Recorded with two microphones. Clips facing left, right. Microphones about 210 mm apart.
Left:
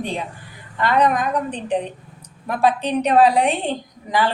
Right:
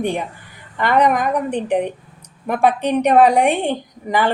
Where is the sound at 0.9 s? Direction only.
10° right (ahead or behind).